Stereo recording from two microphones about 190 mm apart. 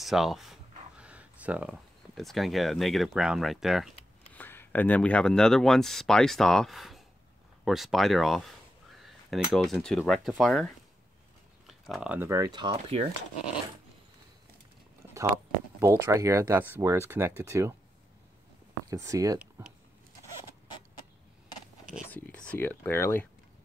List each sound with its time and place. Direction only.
0.0 s a sound: centre (ahead or behind)
4.4 s speech: 10° left (ahead or behind); by 13.1 s 30° right (ahead or behind)
15.8 s speech: 15° right (ahead or behind)
18.9 s speech: 15° right (ahead or behind)
22.1 s speech: 10° left (ahead or behind)